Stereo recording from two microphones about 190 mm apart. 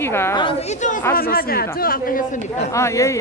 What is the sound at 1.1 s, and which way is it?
Speech, 50° left (ahead or behind).